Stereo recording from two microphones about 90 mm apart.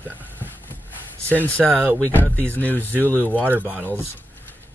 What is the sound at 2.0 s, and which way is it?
Speech, 20° left (ahead or behind).